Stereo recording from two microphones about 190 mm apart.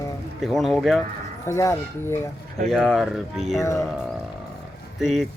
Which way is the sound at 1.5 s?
15° left (ahead or behind).